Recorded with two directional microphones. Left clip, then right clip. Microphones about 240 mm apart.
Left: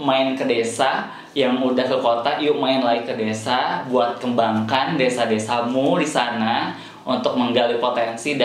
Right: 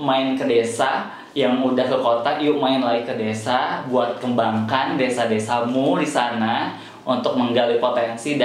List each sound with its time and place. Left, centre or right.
0.0 s speech: left